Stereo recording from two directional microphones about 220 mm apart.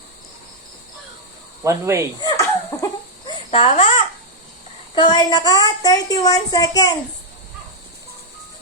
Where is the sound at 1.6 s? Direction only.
15° right (ahead or behind).